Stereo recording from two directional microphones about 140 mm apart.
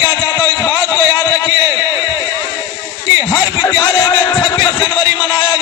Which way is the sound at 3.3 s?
25° left (ahead or behind).